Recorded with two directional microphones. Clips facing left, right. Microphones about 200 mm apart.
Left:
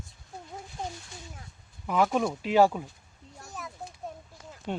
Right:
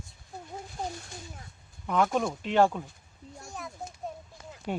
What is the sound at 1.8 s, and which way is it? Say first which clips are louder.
Speech: left 1 dB; 5° left (ahead or behind).